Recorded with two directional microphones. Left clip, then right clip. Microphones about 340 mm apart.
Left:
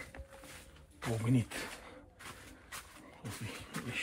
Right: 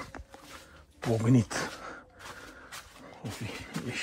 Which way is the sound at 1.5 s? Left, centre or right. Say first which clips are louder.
Right 9 dB; right.